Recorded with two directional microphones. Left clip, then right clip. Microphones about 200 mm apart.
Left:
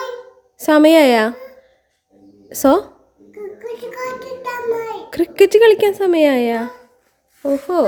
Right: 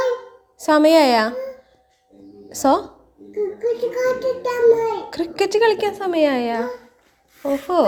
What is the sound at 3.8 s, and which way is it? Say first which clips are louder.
Child singing: right 6 dB; 15° left (ahead or behind).